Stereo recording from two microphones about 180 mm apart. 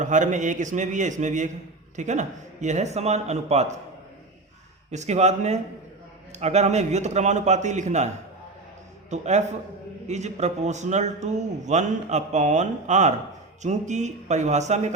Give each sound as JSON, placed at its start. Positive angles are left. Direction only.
{"t": 0.0, "sound": "a man's voice", "side_deg": -45}
{"t": 4.9, "sound": "a man's voice", "side_deg": -40}